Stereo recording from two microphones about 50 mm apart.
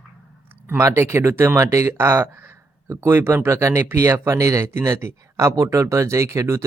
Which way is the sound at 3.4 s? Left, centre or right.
Right.